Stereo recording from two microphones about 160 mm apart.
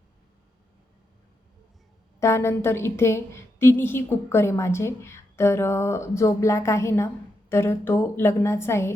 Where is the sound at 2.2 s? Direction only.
15° left (ahead or behind).